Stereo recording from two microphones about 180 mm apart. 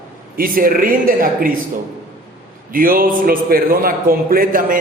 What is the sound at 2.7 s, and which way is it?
A man's voice, 50° right (ahead or behind).